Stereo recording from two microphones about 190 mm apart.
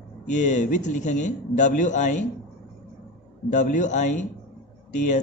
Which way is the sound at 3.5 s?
40° left (ahead or behind).